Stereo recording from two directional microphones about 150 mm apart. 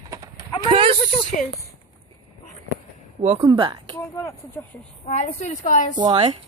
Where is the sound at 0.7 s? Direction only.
35° right (ahead or behind).